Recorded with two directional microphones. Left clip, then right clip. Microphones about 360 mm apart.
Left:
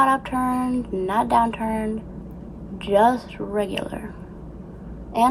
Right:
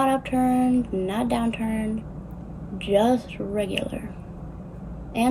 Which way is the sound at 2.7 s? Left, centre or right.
Centre.